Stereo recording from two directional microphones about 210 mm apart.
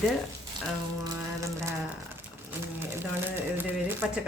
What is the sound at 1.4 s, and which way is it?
Speech, 15° right (ahead or behind).